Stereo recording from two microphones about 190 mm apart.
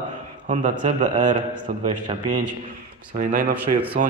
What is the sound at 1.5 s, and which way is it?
Speech, 25° right (ahead or behind).